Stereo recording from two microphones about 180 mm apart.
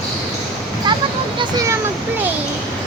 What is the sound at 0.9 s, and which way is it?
Vehicle, 25° right (ahead or behind).